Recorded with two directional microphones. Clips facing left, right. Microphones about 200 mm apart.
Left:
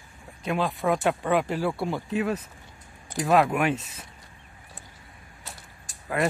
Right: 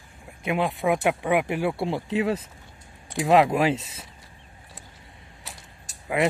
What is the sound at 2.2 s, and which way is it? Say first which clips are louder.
Speech: right 2 dB; 25° right (ahead or behind).